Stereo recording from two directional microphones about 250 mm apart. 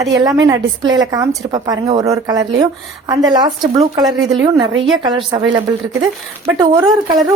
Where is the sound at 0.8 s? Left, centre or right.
Right.